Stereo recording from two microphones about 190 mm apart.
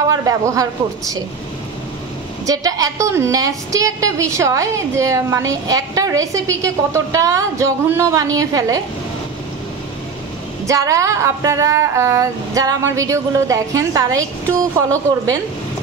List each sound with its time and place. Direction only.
0.1 s a woman's voice: 15° right (ahead or behind)
2.4 s a woman's voice: 20° right (ahead or behind)
10.7 s a woman's voice: 15° right (ahead or behind)